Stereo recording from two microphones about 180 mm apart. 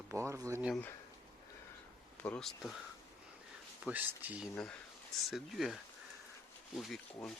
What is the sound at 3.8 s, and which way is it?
Speech, 10° right (ahead or behind).